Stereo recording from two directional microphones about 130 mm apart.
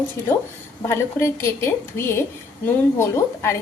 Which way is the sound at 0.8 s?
20° left (ahead or behind).